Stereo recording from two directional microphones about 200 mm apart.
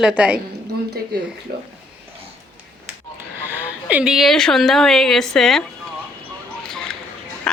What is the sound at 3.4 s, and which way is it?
Speech, 10° right (ahead or behind).